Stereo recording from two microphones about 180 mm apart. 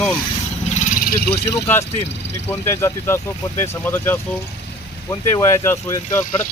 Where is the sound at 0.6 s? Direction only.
40° left (ahead or behind).